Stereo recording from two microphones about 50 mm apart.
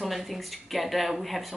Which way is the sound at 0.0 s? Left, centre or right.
Centre.